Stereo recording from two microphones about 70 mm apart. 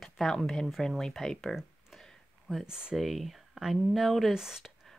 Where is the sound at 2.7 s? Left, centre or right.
Centre.